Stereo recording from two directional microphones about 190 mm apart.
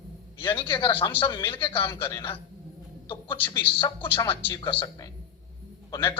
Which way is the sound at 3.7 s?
10° left (ahead or behind).